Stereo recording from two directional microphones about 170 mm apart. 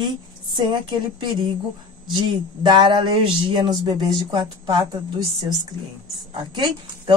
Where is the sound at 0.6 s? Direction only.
25° right (ahead or behind).